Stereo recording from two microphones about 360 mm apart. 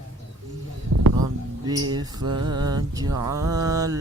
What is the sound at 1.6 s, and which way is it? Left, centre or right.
Mantra, centre.